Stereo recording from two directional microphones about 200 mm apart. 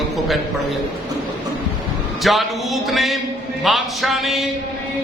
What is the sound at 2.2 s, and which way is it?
A man's voice, centre (ahead or behind).